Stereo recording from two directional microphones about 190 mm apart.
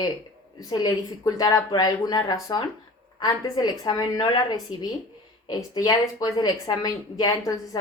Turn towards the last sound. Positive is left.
turn(degrees=20)  # may be behind; listen again after turning